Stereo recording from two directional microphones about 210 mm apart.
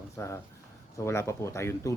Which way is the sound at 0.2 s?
10° left (ahead or behind).